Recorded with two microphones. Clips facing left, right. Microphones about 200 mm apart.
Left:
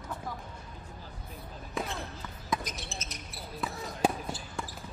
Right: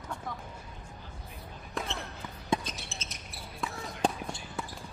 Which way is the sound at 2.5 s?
30° right (ahead or behind).